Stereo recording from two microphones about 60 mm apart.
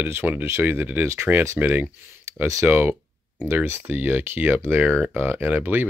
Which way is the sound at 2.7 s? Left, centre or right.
Right.